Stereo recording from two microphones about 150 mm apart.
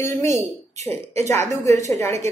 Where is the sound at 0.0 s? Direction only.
20° left (ahead or behind).